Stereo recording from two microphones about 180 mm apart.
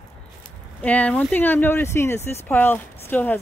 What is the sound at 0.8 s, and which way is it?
Speech, 10° left (ahead or behind).